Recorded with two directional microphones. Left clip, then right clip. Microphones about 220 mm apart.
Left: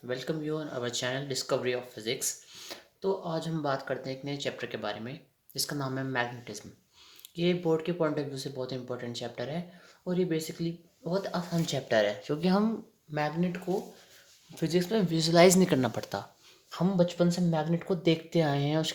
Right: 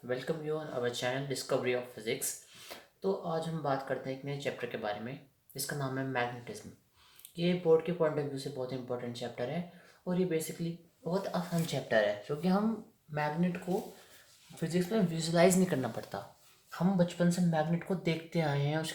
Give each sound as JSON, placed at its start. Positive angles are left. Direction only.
{"t": 0.1, "sound": "speech", "side_deg": 45}